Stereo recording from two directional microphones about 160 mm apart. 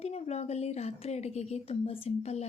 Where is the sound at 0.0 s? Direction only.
40° left (ahead or behind).